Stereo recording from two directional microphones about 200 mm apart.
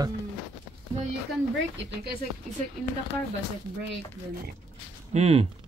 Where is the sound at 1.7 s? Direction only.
55° right (ahead or behind).